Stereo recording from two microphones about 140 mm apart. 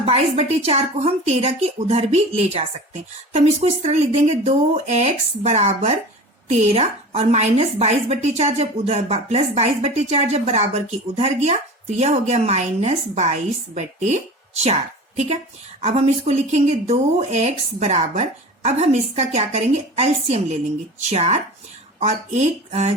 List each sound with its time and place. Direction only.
0.0 s a woman's voice: 45° right (ahead or behind)